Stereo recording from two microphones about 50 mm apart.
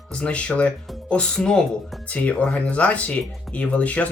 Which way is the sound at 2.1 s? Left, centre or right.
Left.